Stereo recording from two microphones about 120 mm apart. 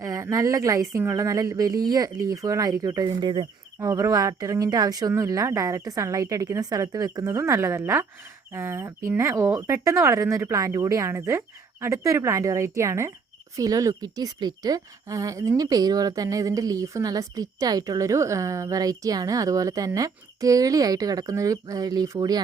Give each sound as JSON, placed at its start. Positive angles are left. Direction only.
{"t": 0.0, "sound": "speech", "side_deg": -25}
{"t": 3.8, "sound": "a woman's voice", "side_deg": -25}